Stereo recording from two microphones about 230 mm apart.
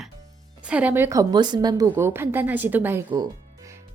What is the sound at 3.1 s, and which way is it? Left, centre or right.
Music, centre.